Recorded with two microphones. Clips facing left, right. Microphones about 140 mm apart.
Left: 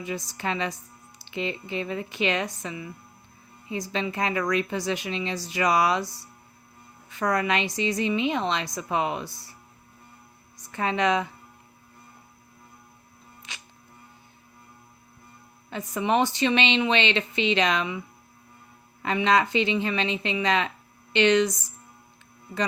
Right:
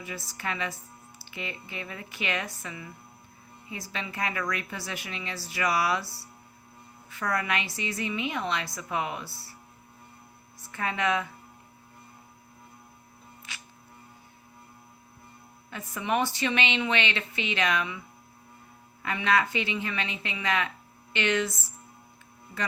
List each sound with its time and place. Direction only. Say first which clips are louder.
0.0 s speech: left 5 dB; 20° left (ahead or behind)
10.6 s speech: left 5 dB; 25° left (ahead or behind)
13.5 s music: left 1 dB; 20° left (ahead or behind)
15.7 s speech: left 5 dB; 25° left (ahead or behind)
19.0 s speech: left 4 dB; 25° left (ahead or behind)